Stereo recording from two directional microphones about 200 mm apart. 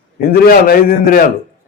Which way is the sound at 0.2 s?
50° left (ahead or behind).